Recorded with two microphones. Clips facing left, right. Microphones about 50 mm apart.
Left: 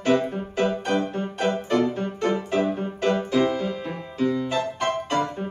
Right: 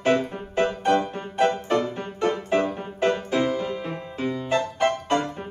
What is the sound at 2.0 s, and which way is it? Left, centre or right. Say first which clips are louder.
Music: left 1 dB; centre.